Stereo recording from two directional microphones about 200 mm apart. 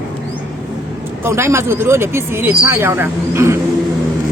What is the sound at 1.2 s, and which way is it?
Speech, 15° right (ahead or behind).